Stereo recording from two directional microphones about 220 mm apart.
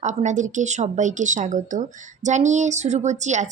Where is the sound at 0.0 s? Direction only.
30° right (ahead or behind).